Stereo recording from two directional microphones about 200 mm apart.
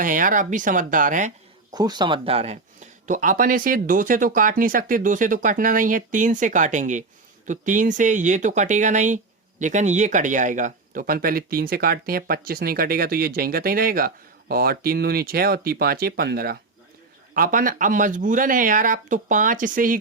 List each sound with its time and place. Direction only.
0.0 s speech: 40° right (ahead or behind)
1.7 s speech: 20° right (ahead or behind); by 20.0 s 40° right (ahead or behind)